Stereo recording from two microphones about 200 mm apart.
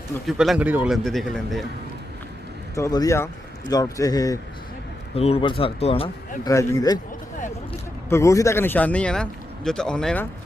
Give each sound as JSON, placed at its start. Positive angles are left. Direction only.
{"t": 0.3, "sound": "a man's voice", "side_deg": 0}
{"t": 2.7, "sound": "a man's voice", "side_deg": 15}
{"t": 5.1, "sound": "speech", "side_deg": 30}
{"t": 6.4, "sound": "a man's voice", "side_deg": 15}
{"t": 8.1, "sound": "a man's voice", "side_deg": 15}